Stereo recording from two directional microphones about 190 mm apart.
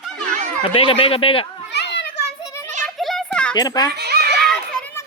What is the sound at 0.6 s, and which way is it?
Speech, 30° left (ahead or behind).